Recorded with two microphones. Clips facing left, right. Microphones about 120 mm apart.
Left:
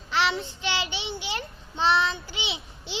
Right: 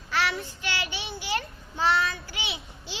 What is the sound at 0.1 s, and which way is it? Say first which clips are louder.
Child singing: left 2 dB; 25° left (ahead or behind).